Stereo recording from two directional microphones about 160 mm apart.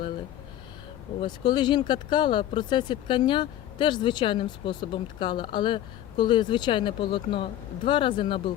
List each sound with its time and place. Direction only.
1.2 s speech: 30° left (ahead or behind)